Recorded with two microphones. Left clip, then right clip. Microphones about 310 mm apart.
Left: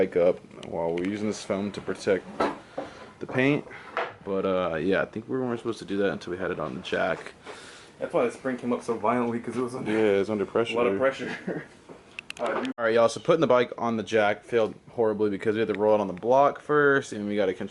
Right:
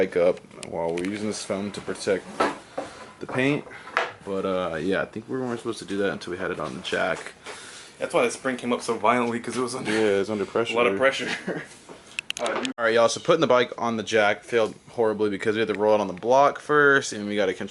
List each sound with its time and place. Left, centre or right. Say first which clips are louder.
0.0 s speech: right 1 dB; centre
3.2 s speech: even; centre
14.9 s speech: right 2 dB; centre
15.2 s speech: right 2 dB; centre